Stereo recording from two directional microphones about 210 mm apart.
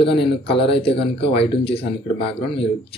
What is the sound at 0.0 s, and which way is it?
Speech, 25° left (ahead or behind).